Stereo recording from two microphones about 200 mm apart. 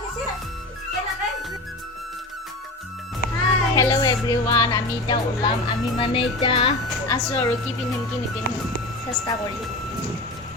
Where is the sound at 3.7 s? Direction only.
15° left (ahead or behind).